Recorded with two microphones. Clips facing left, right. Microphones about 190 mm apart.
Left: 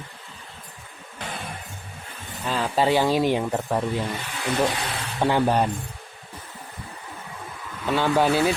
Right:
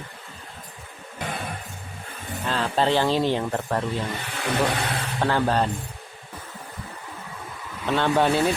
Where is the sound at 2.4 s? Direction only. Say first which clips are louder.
Left 1 dB; 5° left (ahead or behind).